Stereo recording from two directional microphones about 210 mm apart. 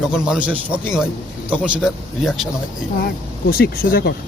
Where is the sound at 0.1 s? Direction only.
5° right (ahead or behind).